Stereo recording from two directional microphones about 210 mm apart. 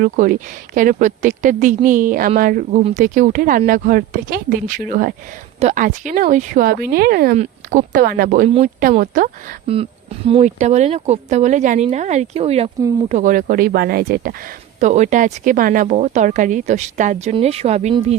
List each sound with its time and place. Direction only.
0.0 s speech: 40° right (ahead or behind)
7.3 s speech: 35° right (ahead or behind)
8.4 s speech: 30° right (ahead or behind); by 14.3 s 45° right (ahead or behind)
14.8 s speech: 35° right (ahead or behind)